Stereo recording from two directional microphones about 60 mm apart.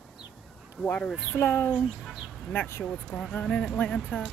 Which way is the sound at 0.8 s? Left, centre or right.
Left.